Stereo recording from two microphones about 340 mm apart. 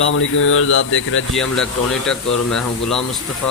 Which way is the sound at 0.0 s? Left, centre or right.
Left.